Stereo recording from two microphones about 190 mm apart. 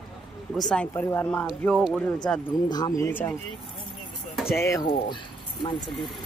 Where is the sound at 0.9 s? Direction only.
15° left (ahead or behind).